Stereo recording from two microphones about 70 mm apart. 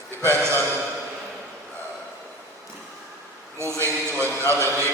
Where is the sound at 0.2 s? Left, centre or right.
Right.